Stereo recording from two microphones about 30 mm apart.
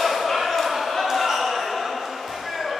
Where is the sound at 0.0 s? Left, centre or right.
Centre.